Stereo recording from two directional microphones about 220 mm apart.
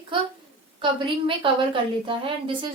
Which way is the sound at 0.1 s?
20° right (ahead or behind).